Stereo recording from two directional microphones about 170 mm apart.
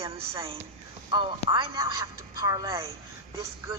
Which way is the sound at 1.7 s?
20° right (ahead or behind).